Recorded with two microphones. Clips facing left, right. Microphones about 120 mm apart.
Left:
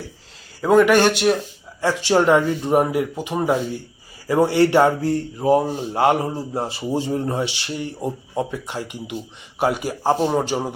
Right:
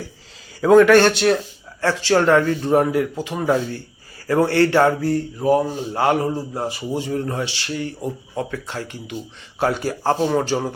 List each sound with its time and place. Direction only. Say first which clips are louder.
0.6 s speech: right 3 dB; 5° left (ahead or behind)